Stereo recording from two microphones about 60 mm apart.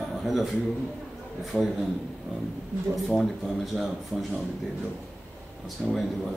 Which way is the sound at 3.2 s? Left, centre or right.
Centre.